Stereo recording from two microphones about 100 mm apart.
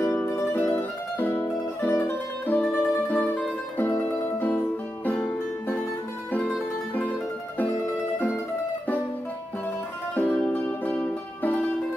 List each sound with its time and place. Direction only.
0.0 s music: 25° left (ahead or behind)
7.0 s mandolin: 15° left (ahead or behind)
10.1 s music: 15° left (ahead or behind)